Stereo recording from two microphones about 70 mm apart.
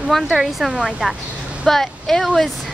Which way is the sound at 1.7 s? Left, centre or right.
Centre.